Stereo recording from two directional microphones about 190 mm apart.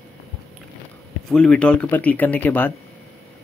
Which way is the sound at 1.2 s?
5° left (ahead or behind).